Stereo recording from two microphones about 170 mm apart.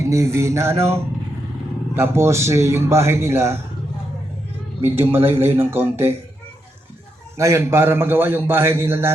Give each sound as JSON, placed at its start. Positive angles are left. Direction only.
{"t": 0.0, "sound": "a man's voice", "side_deg": -15}
{"t": 2.0, "sound": "a man's voice", "side_deg": -15}
{"t": 4.8, "sound": "a man's voice", "side_deg": -10}
{"t": 7.3, "sound": "a man's voice", "side_deg": -15}